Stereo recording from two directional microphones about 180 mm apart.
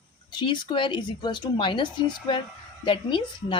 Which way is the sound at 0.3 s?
25° left (ahead or behind).